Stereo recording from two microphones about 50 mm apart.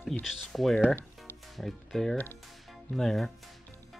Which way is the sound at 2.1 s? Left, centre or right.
Left.